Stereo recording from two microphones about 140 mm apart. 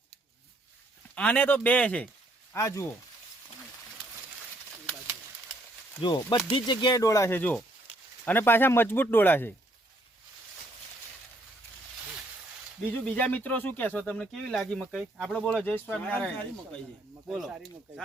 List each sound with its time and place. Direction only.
1.1 s speech: 10° left (ahead or behind)
2.5 s speech: 20° left (ahead or behind)
6.0 s speech: 30° left (ahead or behind); by 9.6 s 15° left (ahead or behind)
12.9 s speech: 10° left (ahead or behind)